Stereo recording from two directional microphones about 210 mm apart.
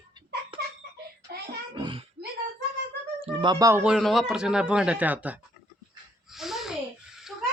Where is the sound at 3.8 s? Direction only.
Centre (ahead or behind).